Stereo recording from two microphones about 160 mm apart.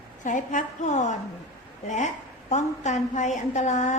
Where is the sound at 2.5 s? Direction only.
45° left (ahead or behind).